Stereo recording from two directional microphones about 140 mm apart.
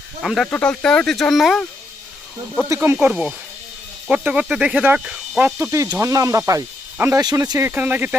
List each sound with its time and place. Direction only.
0.2 s speech: centre (ahead or behind)
2.6 s speech: 20° right (ahead or behind)
3.1 s speech: 5° right (ahead or behind)
5.9 s speech: 20° right (ahead or behind)
7.7 s speech: 10° right (ahead or behind)